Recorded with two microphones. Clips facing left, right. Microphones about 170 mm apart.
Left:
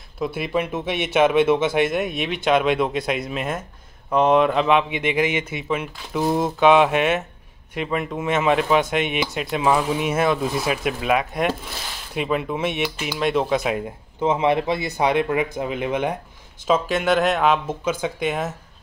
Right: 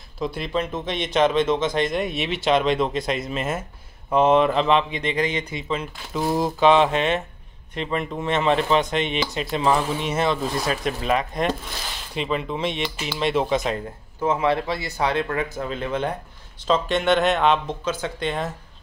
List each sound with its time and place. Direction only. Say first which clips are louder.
0.2 s speech: left 2 dB; 5° left (ahead or behind)
13.7 s speech: left 3 dB; 20° left (ahead or behind)